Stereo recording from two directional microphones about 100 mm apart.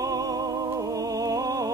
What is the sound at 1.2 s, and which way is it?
Music, 35° right (ahead or behind).